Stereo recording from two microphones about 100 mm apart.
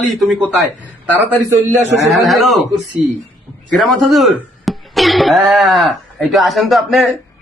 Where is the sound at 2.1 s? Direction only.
Centre (ahead or behind).